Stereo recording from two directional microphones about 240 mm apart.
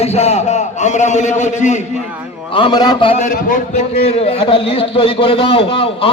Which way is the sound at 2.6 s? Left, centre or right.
Centre.